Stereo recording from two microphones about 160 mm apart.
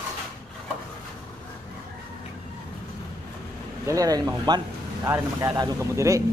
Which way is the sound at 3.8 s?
20° right (ahead or behind).